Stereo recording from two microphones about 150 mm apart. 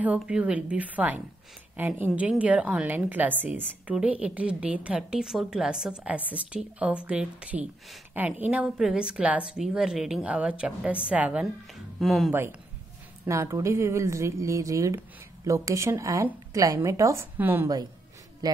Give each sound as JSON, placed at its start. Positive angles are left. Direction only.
{"t": 0.0, "sound": "a woman's voice", "side_deg": -10}
{"t": 13.3, "sound": "a woman's voice", "side_deg": -20}